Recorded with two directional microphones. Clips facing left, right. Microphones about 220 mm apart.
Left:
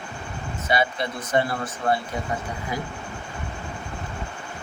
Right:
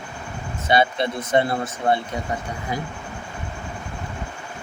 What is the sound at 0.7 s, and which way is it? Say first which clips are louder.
Speech: right 4 dB; 25° right (ahead or behind).